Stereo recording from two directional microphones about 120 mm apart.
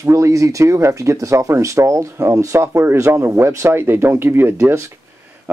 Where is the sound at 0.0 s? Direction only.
25° right (ahead or behind).